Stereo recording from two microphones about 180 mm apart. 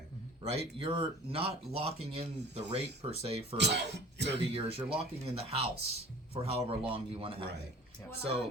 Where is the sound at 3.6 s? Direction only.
70° right (ahead or behind).